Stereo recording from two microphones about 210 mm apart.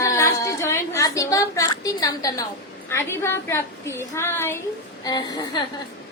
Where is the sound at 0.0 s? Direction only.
15° left (ahead or behind).